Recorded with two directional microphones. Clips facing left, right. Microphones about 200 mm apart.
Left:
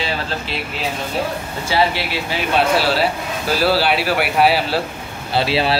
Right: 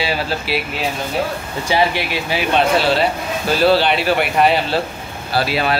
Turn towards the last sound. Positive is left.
turn(degrees=30)  # may be behind; listen again after turning